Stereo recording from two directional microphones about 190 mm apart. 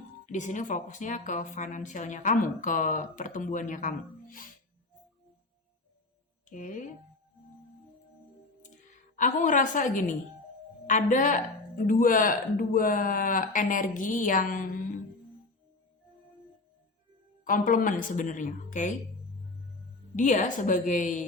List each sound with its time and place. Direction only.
0.3 s speech: 40° left (ahead or behind)
6.5 s speech: 40° left (ahead or behind)
9.1 s speech: 40° left (ahead or behind)
17.4 s speech: 45° left (ahead or behind)
20.1 s speech: 40° left (ahead or behind)